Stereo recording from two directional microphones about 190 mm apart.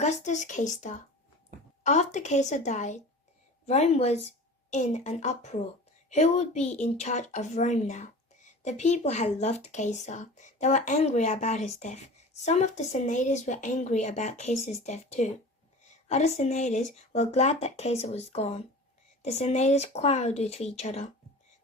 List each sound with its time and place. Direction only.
0.0 s speech: 40° left (ahead or behind)